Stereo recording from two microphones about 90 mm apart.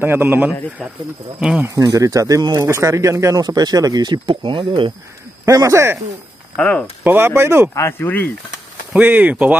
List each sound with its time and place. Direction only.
0.0 s speech: 25° right (ahead or behind)
1.8 s speech: 45° right (ahead or behind)
3.4 s speech: 50° right (ahead or behind); by 4.9 s 70° right (ahead or behind)
5.4 s speech: 35° right (ahead or behind)
6.5 s speech: 15° left (ahead or behind)
7.0 s speech: 25° right (ahead or behind)
7.7 s speech: 30° left (ahead or behind)
8.9 s speech: 20° right (ahead or behind)